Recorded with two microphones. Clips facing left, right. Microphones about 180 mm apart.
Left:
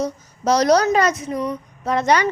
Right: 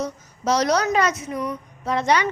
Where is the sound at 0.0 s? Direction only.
40° left (ahead or behind).